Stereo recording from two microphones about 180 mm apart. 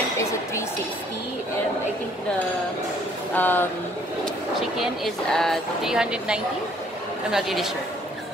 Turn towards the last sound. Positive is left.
turn(degrees=0)  # may be behind; listen again after turning